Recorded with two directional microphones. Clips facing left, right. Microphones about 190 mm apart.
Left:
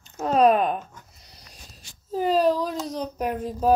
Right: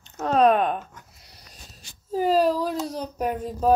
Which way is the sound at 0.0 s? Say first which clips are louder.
Even; centre (ahead or behind).